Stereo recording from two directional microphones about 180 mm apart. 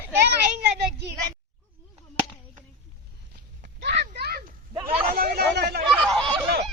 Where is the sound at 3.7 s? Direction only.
70° right (ahead or behind).